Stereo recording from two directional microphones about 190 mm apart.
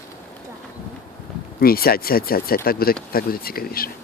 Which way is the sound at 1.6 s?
50° left (ahead or behind).